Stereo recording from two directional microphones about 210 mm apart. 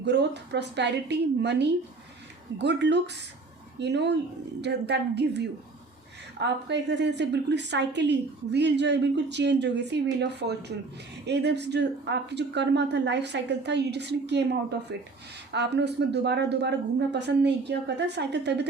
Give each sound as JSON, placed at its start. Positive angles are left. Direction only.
{"t": 0.0, "sound": "a woman's voice", "side_deg": -55}